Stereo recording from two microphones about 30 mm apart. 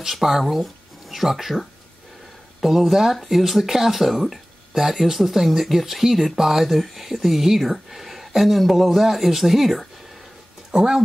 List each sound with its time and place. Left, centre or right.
0.2 s speech: centre
10.7 s speech: centre